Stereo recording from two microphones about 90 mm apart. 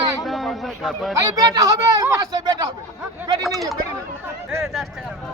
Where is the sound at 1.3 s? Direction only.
40° right (ahead or behind).